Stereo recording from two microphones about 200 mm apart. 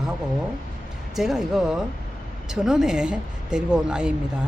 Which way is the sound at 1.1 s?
Centre (ahead or behind).